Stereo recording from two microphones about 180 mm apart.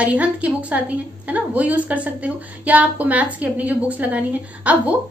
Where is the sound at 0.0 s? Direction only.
5° right (ahead or behind).